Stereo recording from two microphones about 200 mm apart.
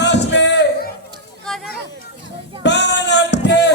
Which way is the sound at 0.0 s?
60° left (ahead or behind).